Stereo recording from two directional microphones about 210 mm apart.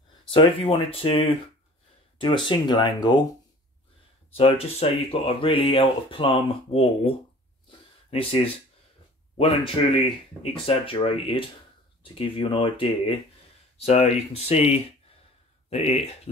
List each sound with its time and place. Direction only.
0.3 s speech: 25° left (ahead or behind)
4.4 s speech: 30° left (ahead or behind)
10.0 s speech: 25° left (ahead or behind)